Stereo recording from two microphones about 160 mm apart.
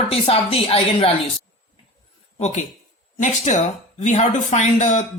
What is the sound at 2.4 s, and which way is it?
Speech, 50° left (ahead or behind).